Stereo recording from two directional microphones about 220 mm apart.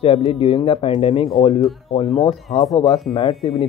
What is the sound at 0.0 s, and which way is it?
Speech, 25° left (ahead or behind).